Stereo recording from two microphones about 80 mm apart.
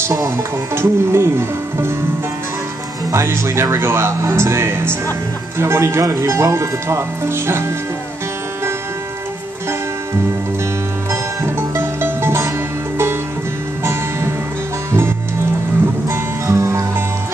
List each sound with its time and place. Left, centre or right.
0.7 s speech: right
3.1 s speech: right
11.1 s music: right
14.9 s music: right